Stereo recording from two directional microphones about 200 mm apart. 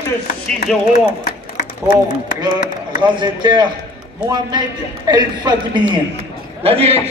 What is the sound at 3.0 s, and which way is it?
A man's voice, 20° right (ahead or behind).